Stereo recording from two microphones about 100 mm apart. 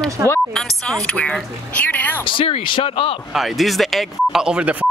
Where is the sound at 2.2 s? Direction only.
65° left (ahead or behind).